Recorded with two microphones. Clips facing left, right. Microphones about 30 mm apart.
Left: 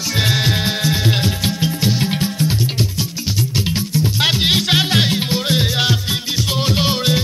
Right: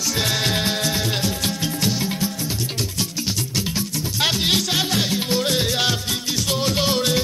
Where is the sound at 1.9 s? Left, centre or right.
Left.